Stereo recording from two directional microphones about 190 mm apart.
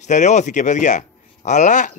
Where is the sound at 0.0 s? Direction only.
40° left (ahead or behind).